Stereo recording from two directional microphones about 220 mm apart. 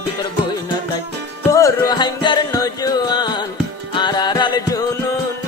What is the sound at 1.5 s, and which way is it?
Music, 15° left (ahead or behind).